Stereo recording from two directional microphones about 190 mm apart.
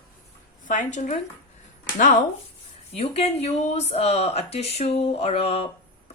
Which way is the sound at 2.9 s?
30° left (ahead or behind).